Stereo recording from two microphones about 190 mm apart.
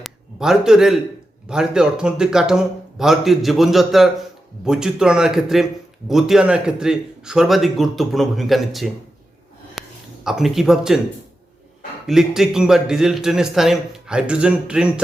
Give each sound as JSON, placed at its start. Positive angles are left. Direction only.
{"t": 0.0, "sound": "a man's voice", "side_deg": 0}
{"t": 9.8, "sound": "a sound", "side_deg": 0}
{"t": 10.2, "sound": "a man's voice", "side_deg": 0}
{"t": 12.0, "sound": "a man's voice", "side_deg": 0}